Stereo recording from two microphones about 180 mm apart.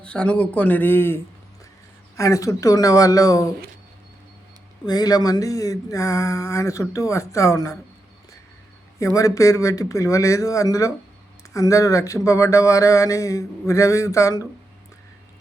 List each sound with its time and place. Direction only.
0.0 s speech: 5° left (ahead or behind)
4.9 s speech: 20° left (ahead or behind)
9.0 s speech: 15° left (ahead or behind)